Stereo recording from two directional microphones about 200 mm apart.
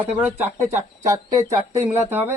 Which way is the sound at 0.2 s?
10° right (ahead or behind).